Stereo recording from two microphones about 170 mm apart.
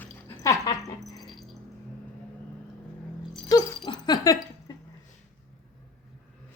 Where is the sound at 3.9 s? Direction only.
25° left (ahead or behind).